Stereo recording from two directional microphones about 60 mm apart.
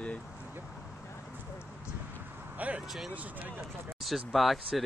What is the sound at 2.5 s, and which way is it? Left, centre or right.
Speech, right.